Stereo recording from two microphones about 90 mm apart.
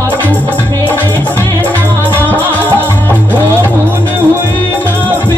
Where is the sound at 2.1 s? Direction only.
20° left (ahead or behind).